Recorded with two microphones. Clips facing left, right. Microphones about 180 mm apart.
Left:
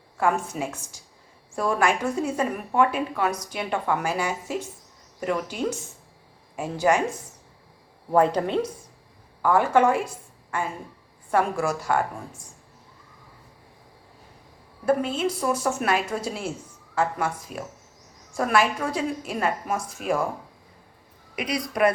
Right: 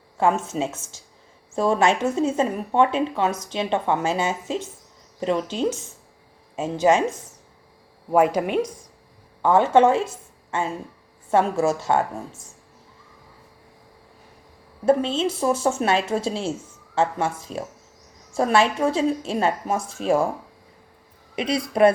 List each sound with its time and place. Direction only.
0.2 s speech: 25° right (ahead or behind)
8.1 s speech: 10° right (ahead or behind)
9.4 s speech: 25° right (ahead or behind)
14.8 s speech: 25° right (ahead or behind)
21.3 s speech: 25° right (ahead or behind)